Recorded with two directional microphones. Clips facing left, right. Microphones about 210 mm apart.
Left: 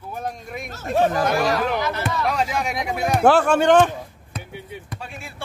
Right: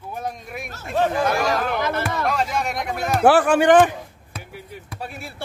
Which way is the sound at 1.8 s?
55° right (ahead or behind).